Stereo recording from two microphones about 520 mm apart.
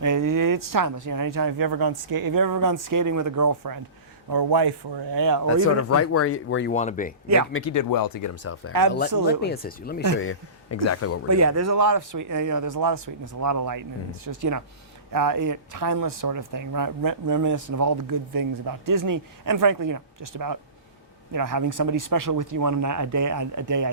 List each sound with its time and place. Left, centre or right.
0.0 s speech: right
5.5 s speech: left
7.5 s speech: left
11.3 s speech: right